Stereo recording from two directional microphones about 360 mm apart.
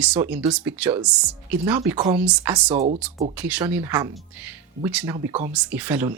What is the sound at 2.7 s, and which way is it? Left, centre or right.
Speech, centre.